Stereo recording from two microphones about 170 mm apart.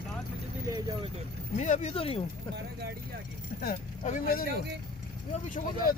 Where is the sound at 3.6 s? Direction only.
60° left (ahead or behind).